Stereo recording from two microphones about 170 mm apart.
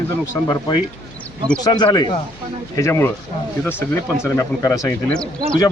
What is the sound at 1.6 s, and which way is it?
Speech, 30° left (ahead or behind).